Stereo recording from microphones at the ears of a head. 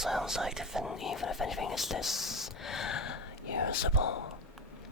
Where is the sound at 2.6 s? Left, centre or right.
Left.